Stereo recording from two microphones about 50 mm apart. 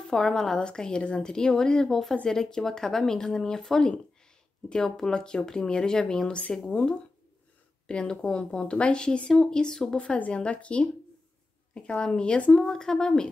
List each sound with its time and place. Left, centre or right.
0.1 s a woman's voice: centre
9.9 s speech: left
12.6 s a woman's voice: centre